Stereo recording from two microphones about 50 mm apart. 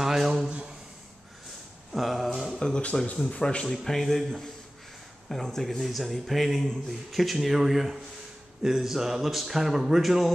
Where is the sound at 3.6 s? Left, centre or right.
Centre.